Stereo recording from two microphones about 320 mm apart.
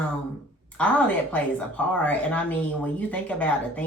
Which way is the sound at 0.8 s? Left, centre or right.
Centre.